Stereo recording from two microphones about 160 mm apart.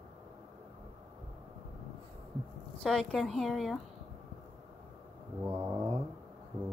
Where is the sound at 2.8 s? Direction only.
5° left (ahead or behind).